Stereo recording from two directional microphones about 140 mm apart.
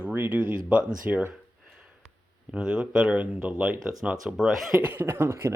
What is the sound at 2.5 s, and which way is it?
Speech, 5° right (ahead or behind).